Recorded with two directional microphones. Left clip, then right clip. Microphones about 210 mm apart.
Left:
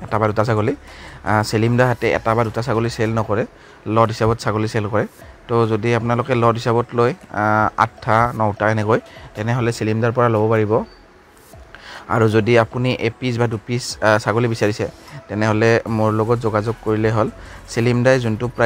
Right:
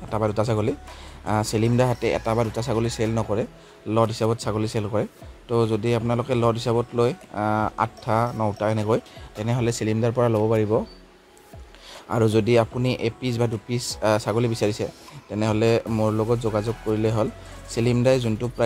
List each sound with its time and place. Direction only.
0.1 s speech: 20° left (ahead or behind)
11.9 s speech: 15° left (ahead or behind)